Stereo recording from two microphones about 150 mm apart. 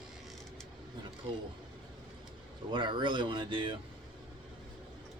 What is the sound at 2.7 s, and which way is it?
Speech, 30° right (ahead or behind).